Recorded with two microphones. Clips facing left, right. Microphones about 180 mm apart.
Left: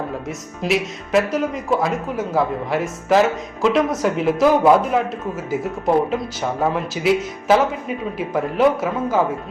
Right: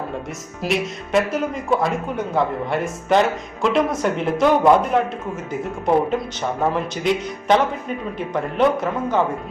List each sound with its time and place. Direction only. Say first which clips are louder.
0.3 s speech: left 3 dB; centre (ahead or behind)